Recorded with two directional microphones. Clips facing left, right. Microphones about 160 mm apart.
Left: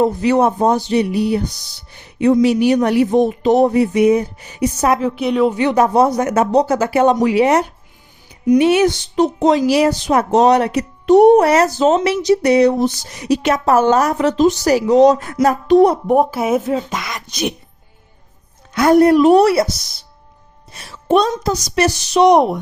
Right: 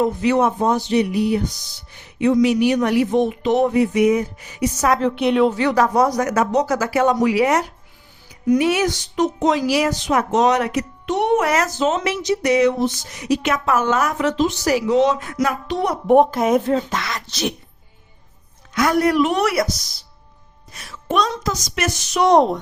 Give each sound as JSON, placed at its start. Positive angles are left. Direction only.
{"t": 0.0, "sound": "speech", "side_deg": 35}
{"t": 4.9, "sound": "a woman's voice", "side_deg": 5}
{"t": 5.5, "sound": "speech", "side_deg": 20}
{"t": 16.0, "sound": "speech", "side_deg": 5}
{"t": 18.7, "sound": "speech", "side_deg": 30}
{"t": 20.7, "sound": "a child's voice", "side_deg": 30}
{"t": 22.3, "sound": "speech", "side_deg": 10}